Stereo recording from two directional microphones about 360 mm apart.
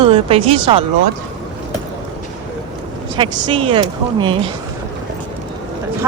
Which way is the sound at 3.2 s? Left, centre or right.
Centre.